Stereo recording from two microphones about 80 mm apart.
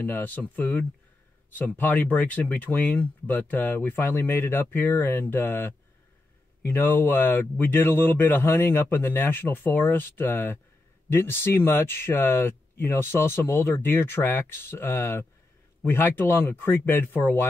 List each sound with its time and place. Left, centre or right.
0.0 s speech: left